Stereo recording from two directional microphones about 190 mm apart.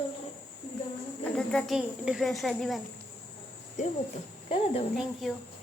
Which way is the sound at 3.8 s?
40° left (ahead or behind).